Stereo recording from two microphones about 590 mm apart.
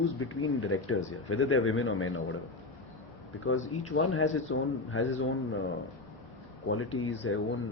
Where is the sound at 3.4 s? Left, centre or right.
Left.